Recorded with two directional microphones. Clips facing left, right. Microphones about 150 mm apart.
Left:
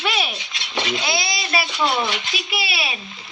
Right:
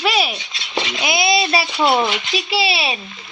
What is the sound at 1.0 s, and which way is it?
Speech, 20° right (ahead or behind).